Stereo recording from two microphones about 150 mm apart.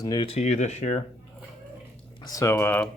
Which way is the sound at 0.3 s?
50° left (ahead or behind).